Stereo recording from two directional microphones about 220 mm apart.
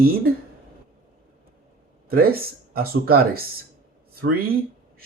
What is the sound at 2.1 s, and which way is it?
Speech, 40° right (ahead or behind).